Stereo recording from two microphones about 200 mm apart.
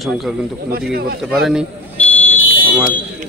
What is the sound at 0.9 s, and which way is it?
Speech, 50° right (ahead or behind).